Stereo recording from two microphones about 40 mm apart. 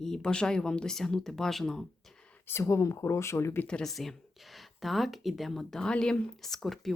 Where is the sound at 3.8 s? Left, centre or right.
Centre.